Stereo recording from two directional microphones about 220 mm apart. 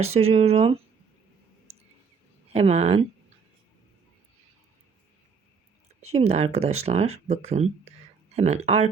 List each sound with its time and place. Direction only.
0.0 s speech: 30° right (ahead or behind)
2.5 s speech: 30° right (ahead or behind)
6.1 s speech: 30° right (ahead or behind)